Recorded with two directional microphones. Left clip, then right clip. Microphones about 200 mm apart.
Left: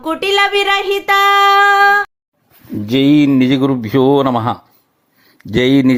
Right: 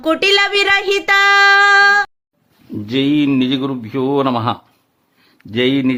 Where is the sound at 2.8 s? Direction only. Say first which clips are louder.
Left 4 dB; 20° left (ahead or behind).